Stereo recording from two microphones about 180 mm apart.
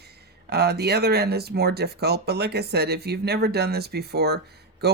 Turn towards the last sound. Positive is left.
turn(degrees=-65)  # may be behind; listen again after turning